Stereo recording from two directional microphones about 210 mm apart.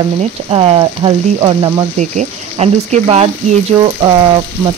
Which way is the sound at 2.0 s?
30° right (ahead or behind).